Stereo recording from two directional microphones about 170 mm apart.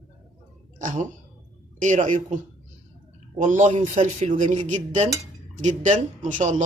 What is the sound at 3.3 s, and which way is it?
Speech, 50° right (ahead or behind).